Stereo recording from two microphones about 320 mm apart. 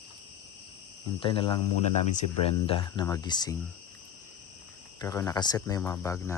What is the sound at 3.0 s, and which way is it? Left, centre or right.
Speech, centre.